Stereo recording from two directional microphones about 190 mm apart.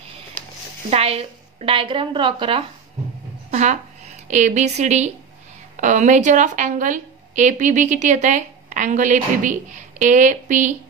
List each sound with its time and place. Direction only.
0.8 s a woman's voice: 30° right (ahead or behind)
3.4 s a sound: 40° right (ahead or behind)
4.3 s a woman's voice: 40° right (ahead or behind)